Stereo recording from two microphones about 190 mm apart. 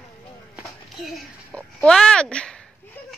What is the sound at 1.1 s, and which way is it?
Speech, 5° left (ahead or behind).